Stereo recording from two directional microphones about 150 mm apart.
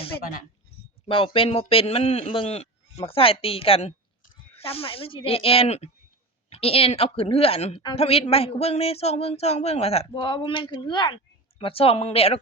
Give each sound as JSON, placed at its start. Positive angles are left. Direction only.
{"t": 0.2, "sound": "speech", "side_deg": 65}
{"t": 1.0, "sound": "a man's voice", "side_deg": 35}
{"t": 10.1, "sound": "a man's voice", "side_deg": 30}